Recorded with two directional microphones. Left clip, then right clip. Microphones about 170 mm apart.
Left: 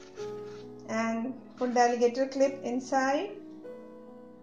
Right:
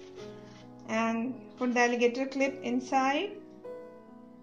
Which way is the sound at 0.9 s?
30° right (ahead or behind).